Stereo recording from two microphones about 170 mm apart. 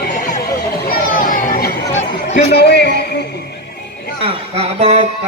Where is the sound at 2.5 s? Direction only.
75° left (ahead or behind).